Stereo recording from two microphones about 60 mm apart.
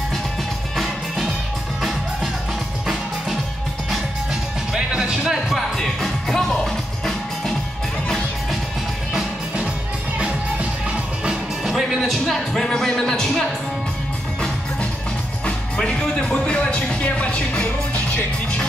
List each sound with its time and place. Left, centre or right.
0.7 s music: centre
4.7 s music: centre
10.1 s music: right
11.2 s music: centre
12.0 s speech: centre
15.4 s music: centre
16.5 s speech: left